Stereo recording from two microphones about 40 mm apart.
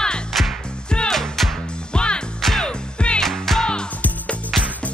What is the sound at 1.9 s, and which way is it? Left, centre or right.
Music, left.